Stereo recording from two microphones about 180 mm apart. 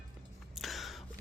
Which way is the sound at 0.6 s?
Centre (ahead or behind).